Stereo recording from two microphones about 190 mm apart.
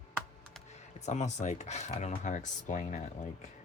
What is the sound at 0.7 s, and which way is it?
Speech, 35° left (ahead or behind).